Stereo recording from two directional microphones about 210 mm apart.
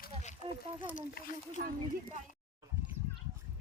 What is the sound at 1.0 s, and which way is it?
Speech, 40° left (ahead or behind).